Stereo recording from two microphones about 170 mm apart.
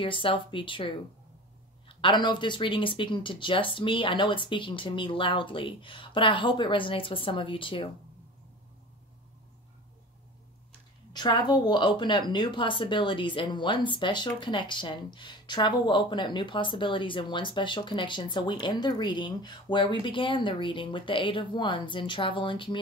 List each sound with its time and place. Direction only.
0.0 s a woman's voice: 30° left (ahead or behind)
11.1 s a woman's voice: 25° left (ahead or behind)